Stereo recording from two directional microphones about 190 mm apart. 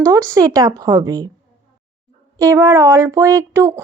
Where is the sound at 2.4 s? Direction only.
15° right (ahead or behind).